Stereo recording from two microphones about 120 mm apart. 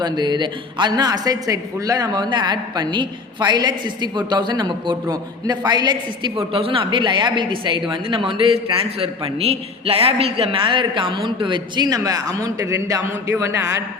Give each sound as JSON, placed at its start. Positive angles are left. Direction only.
{"t": 0.0, "sound": "a woman's voice", "side_deg": -35}